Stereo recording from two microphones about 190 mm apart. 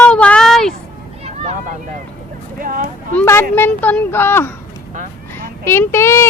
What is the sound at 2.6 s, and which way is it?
Speech, 45° right (ahead or behind).